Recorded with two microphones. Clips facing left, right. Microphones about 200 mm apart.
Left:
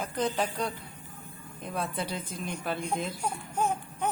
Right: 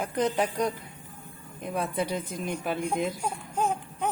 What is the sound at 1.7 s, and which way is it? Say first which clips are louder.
A woman's voice: right 4 dB; 15° right (ahead or behind).